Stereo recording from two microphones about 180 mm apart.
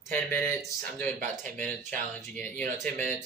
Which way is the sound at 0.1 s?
10° left (ahead or behind).